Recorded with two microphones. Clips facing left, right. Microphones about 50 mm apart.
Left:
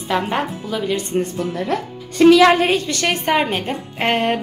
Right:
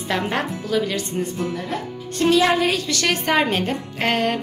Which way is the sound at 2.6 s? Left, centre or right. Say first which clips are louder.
Left 3 dB; left.